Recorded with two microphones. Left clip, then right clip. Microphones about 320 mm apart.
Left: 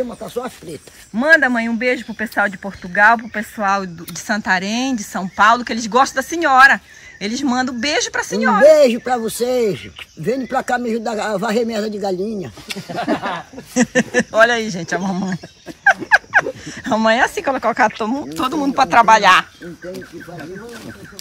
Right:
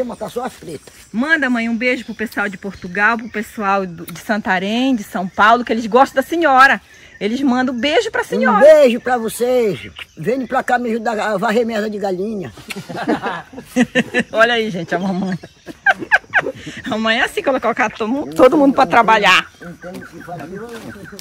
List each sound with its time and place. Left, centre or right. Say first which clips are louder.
0.3 s speech: right 1 dB; centre
12.9 s a sound: right 1 dB; centre
13.7 s speech: even; centre